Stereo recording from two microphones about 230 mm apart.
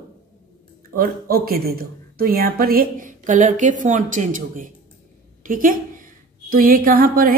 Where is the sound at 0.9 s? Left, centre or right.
Right.